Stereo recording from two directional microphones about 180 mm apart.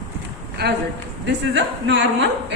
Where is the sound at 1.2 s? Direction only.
85° right.